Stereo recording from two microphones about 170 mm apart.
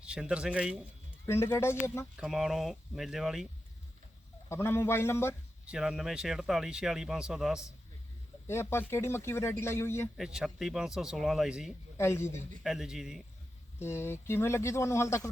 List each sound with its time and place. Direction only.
0.0 s speech: 5° right (ahead or behind)
1.3 s speech: 15° left (ahead or behind)
2.1 s speech: 5° right (ahead or behind)
4.4 s speech: 15° left (ahead or behind)
5.6 s speech: 5° right (ahead or behind)
8.4 s speech: 15° left (ahead or behind)
10.2 s speech: 5° right (ahead or behind)
11.9 s speech: 15° left (ahead or behind)
12.6 s speech: 5° right (ahead or behind)
13.7 s speech: 15° left (ahead or behind)